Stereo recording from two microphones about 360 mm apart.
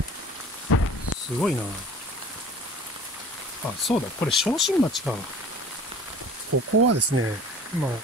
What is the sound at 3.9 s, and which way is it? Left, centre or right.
Speech, centre.